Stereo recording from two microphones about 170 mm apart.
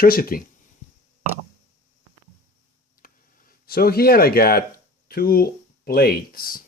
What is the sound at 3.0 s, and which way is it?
Speech, 60° left (ahead or behind).